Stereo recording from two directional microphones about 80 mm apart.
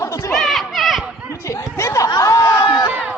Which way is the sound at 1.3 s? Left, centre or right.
Left.